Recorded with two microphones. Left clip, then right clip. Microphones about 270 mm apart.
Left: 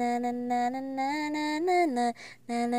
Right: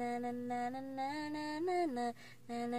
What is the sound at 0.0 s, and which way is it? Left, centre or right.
Music, left.